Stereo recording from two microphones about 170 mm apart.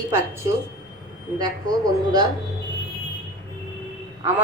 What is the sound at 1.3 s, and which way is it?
Speech, 25° right (ahead or behind).